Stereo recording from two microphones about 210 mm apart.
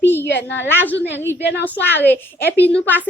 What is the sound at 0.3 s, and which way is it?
Speech, 55° left (ahead or behind).